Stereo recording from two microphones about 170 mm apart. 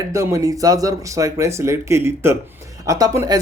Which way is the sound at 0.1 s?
15° right (ahead or behind).